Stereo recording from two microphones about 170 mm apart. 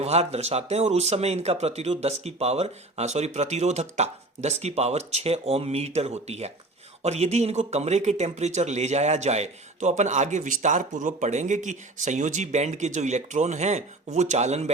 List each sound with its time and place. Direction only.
0.0 s speech: 40° right (ahead or behind)